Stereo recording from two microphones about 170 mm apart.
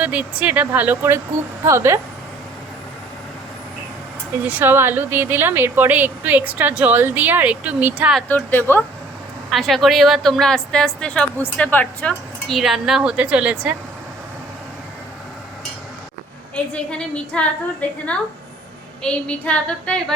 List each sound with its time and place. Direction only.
0.0 s a woman's voice: 10° right (ahead or behind)
4.4 s a woman's voice: 10° right (ahead or behind)
8.3 s a woman's voice: 10° left (ahead or behind)
9.5 s a woman's voice: centre (ahead or behind)
16.7 s a woman's voice: 5° left (ahead or behind)